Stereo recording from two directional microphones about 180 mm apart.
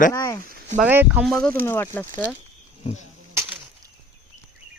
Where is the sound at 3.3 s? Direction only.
15° right (ahead or behind).